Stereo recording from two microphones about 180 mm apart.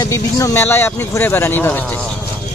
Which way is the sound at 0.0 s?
20° left (ahead or behind).